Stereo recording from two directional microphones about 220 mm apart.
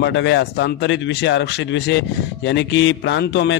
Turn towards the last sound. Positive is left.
turn(degrees=50)  # may be behind; listen again after turning